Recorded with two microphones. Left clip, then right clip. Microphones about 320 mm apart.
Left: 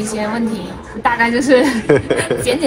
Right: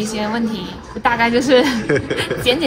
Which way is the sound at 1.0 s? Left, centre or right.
Right.